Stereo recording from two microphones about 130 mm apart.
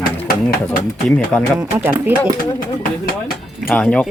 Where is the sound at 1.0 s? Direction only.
5° left (ahead or behind).